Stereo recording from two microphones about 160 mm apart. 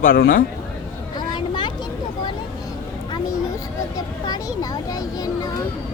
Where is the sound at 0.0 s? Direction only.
65° left (ahead or behind).